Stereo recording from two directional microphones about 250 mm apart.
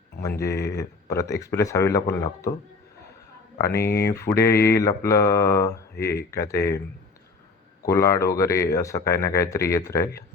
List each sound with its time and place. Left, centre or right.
0.2 s speech: centre
0.5 s speech: left
0.8 s speech: centre
3.8 s speech: left
4.0 s speech: centre
7.9 s speech: centre